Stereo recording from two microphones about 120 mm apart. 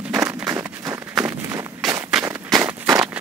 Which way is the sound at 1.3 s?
20° right (ahead or behind).